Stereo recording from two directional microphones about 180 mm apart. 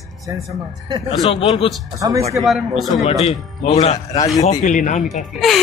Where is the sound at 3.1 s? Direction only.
35° left (ahead or behind).